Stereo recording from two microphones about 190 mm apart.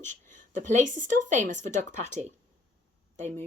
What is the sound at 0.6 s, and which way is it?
Speech, 40° right (ahead or behind).